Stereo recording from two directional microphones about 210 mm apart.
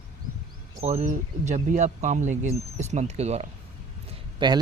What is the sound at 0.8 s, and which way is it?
Speech, 30° right (ahead or behind).